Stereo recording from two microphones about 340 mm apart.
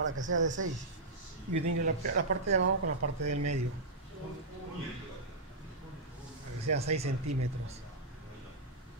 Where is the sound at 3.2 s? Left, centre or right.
Right.